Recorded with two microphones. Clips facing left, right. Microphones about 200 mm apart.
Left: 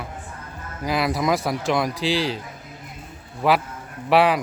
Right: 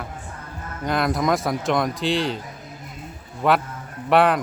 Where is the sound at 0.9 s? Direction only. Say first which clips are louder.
Even; 5° left (ahead or behind).